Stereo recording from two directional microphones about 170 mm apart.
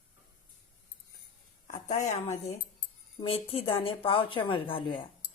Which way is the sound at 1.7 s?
45° left (ahead or behind).